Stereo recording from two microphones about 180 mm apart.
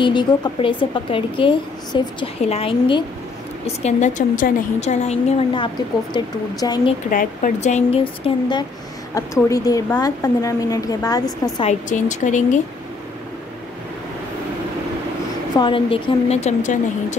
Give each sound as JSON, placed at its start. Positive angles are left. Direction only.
{"t": 0.0, "sound": "a woman's voice", "side_deg": 25}
{"t": 6.1, "sound": "a woman's voice", "side_deg": 20}
{"t": 7.1, "sound": "a woman's voice", "side_deg": 45}
{"t": 11.6, "sound": "a woman's voice", "side_deg": 45}
{"t": 15.5, "sound": "a woman's voice", "side_deg": 25}